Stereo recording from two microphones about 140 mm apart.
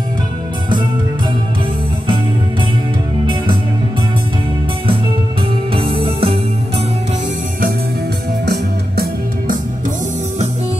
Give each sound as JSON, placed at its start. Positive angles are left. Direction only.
{"t": 5.7, "sound": "music", "side_deg": -40}
{"t": 8.9, "sound": "music", "side_deg": -85}